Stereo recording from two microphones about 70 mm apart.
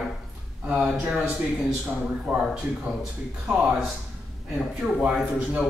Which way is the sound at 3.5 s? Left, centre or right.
Centre.